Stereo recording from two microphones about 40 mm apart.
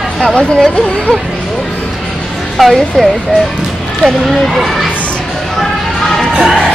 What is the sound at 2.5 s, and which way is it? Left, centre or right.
Speech, centre.